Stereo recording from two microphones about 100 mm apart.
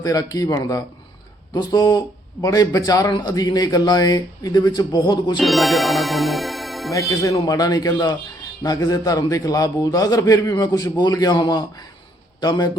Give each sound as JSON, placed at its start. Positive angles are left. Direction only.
{"t": 0.0, "sound": "a man's voice", "side_deg": 40}
{"t": 5.4, "sound": "speech", "side_deg": 0}
{"t": 7.1, "sound": "a man's voice", "side_deg": 30}